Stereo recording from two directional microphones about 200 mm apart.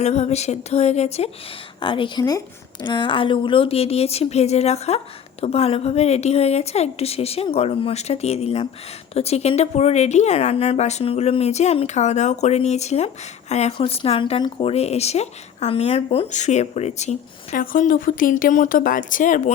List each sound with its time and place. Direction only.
0.0 s a woman's voice: 35° left (ahead or behind)